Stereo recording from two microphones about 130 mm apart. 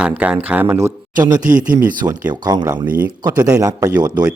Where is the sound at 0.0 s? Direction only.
10° right (ahead or behind).